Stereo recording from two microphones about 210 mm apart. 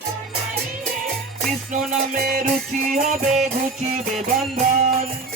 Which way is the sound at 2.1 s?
40° right (ahead or behind).